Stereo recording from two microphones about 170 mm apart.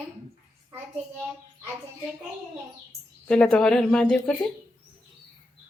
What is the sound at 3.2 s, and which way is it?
Speech, 5° left (ahead or behind).